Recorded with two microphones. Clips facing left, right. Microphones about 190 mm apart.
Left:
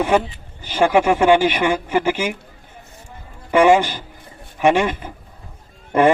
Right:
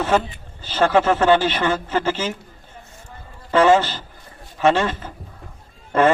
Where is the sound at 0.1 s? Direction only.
15° left (ahead or behind).